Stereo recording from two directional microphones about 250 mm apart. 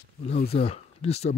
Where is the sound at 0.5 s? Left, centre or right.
Left.